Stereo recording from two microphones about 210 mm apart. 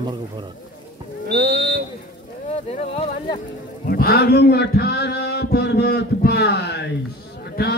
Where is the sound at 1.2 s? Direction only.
45° right (ahead or behind).